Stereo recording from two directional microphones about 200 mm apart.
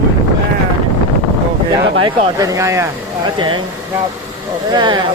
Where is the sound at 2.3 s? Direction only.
15° right (ahead or behind).